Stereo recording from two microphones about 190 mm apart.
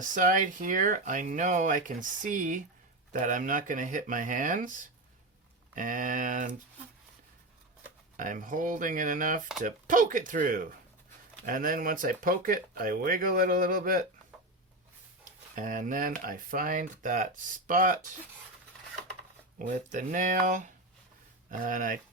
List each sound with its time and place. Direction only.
0.1 s speech: 45° right (ahead or behind)
8.1 s speech: 45° right (ahead or behind)
15.5 s speech: 45° right (ahead or behind)
19.5 s speech: 40° right (ahead or behind)